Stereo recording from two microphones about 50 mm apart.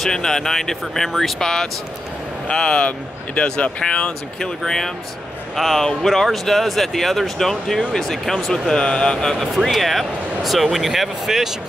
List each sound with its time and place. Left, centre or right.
0.0 s speech: centre
4.6 s speech: centre
9.5 s speech: centre